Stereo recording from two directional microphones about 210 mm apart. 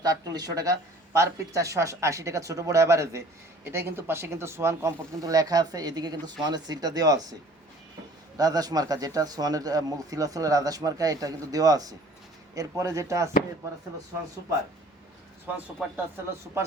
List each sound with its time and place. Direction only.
0.0 s speech: 20° right (ahead or behind)
8.4 s speech: 20° right (ahead or behind)